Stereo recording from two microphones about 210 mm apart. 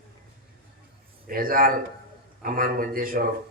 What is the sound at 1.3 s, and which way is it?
Speech, 45° right (ahead or behind).